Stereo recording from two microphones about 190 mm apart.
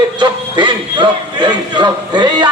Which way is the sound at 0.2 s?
25° right (ahead or behind).